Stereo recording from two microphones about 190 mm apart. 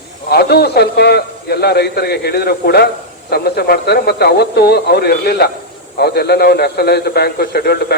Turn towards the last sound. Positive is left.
turn(degrees=60)  # may be behind; listen again after turning